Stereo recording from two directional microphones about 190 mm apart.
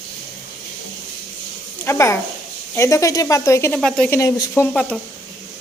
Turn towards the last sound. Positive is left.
turn(degrees=5)  # may be behind; listen again after turning